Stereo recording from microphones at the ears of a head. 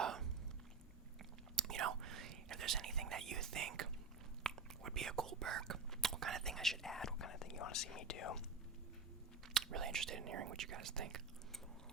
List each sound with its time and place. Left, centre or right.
1.5 s whispering: right
7.2 s speech: left
9.5 s speech: right